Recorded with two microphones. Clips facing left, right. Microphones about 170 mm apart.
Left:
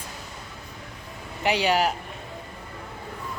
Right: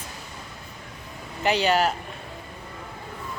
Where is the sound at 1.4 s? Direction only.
15° left (ahead or behind).